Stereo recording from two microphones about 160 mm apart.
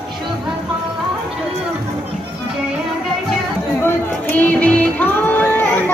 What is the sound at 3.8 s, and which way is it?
Music, 10° left (ahead or behind).